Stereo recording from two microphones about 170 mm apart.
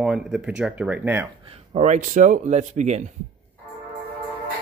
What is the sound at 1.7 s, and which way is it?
Speech, 45° right (ahead or behind).